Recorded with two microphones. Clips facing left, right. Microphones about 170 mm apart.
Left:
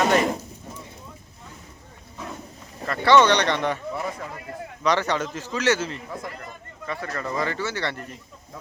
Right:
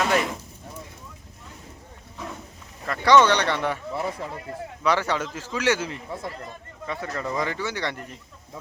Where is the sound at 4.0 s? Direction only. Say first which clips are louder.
Right 2 dB; 25° right (ahead or behind).